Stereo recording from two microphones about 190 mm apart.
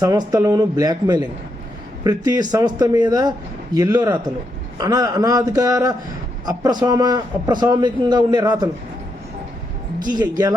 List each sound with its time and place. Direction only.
0.0 s a man's voice: 20° right (ahead or behind)
10.1 s a man's voice: 20° right (ahead or behind)